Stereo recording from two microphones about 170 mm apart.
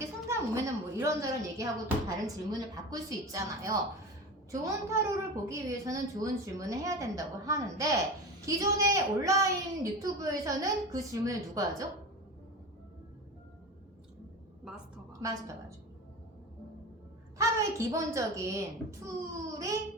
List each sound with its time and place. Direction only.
0.0 s a sound: 15° right (ahead or behind)
2.0 s a woman's voice: 20° right (ahead or behind)
17.3 s a child's voice: 15° right (ahead or behind)